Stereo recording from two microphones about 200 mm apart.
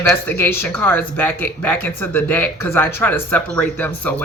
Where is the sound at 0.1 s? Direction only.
10° left (ahead or behind).